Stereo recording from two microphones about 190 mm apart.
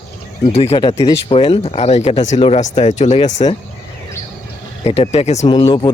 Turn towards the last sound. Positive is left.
turn(degrees=20)  # may be behind; listen again after turning